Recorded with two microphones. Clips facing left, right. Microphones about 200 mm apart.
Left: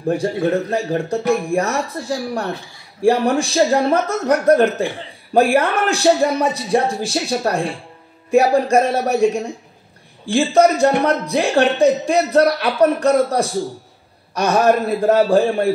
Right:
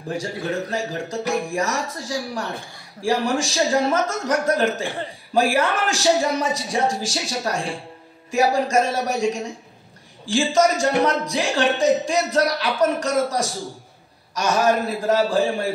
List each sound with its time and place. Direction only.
0.1 s speech: 55° left (ahead or behind)